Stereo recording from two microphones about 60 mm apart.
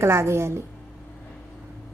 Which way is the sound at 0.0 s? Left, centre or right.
Right.